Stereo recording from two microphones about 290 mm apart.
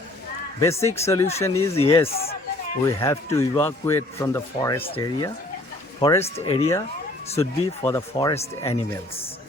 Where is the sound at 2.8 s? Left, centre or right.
Centre.